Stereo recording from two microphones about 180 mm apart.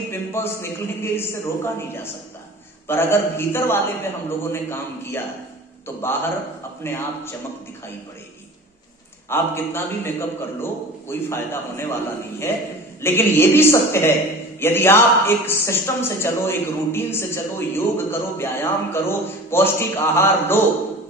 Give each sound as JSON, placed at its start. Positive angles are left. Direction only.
{"t": 0.1, "sound": "a man's voice", "side_deg": 15}
{"t": 2.9, "sound": "a man's voice", "side_deg": 15}
{"t": 6.8, "sound": "a man's voice", "side_deg": 15}
{"t": 9.3, "sound": "a man's voice", "side_deg": 10}